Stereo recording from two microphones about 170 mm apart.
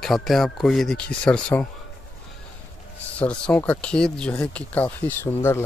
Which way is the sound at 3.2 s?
10° left (ahead or behind).